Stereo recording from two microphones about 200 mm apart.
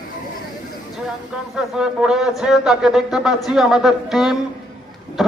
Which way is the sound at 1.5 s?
5° right (ahead or behind).